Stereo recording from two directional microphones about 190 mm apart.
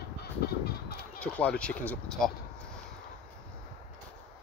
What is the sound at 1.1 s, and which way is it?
Speech, 5° left (ahead or behind).